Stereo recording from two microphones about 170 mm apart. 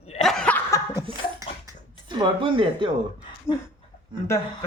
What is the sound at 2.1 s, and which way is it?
Speech, 30° right (ahead or behind).